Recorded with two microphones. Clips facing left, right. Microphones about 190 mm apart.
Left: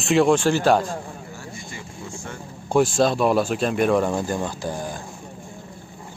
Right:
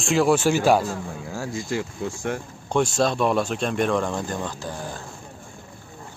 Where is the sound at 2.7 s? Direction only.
5° left (ahead or behind).